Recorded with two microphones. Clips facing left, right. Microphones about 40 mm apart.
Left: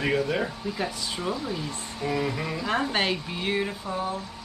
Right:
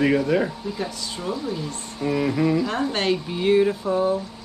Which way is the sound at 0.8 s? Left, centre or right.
Centre.